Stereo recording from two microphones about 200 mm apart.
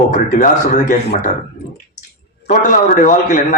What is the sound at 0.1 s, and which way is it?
Speech, 40° left (ahead or behind).